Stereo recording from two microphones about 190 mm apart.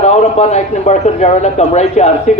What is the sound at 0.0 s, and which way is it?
A man's voice, 35° left (ahead or behind).